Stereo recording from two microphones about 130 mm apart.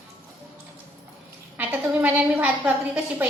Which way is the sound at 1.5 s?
10° right (ahead or behind).